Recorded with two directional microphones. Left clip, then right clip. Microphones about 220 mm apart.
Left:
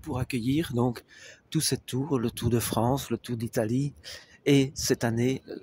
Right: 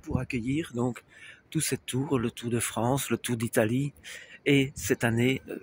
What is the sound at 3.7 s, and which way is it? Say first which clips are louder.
Speech: left 1 dB; 50° left (ahead or behind).